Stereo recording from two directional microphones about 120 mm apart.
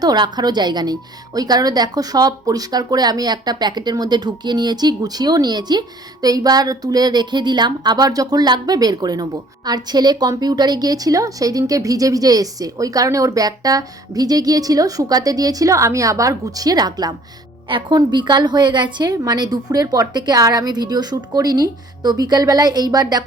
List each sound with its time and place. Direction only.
0.0 s a woman's voice: 35° right (ahead or behind)